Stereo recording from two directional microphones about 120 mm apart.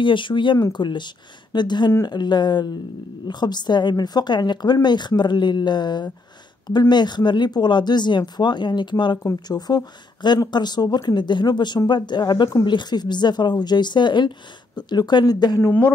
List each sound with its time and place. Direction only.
0.0 s speech: 45° left (ahead or behind)
15.6 s speech: 15° left (ahead or behind)